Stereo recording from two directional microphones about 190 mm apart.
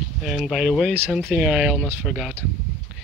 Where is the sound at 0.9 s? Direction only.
10° right (ahead or behind).